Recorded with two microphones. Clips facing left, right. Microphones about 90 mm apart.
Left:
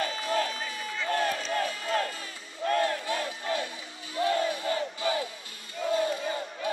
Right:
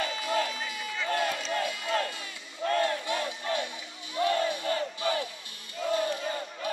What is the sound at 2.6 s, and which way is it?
Crowd, 35° left (ahead or behind).